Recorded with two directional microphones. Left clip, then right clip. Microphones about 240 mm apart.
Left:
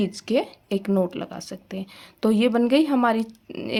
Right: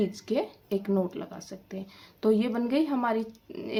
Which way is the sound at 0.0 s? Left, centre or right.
Left.